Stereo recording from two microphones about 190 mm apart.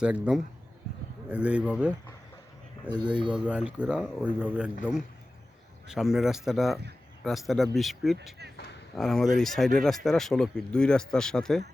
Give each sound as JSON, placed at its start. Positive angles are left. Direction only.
{"t": 0.0, "sound": "speech", "side_deg": -5}
{"t": 2.9, "sound": "speech", "side_deg": -20}
{"t": 3.2, "sound": "speech", "side_deg": -5}
{"t": 8.5, "sound": "a sound", "side_deg": 65}
{"t": 9.0, "sound": "speech", "side_deg": 0}